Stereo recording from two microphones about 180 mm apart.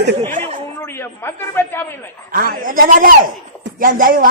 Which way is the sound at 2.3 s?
50° right (ahead or behind).